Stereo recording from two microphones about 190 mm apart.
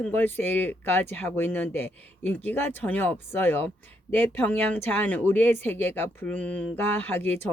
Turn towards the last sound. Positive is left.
turn(degrees=10)  # may be behind; listen again after turning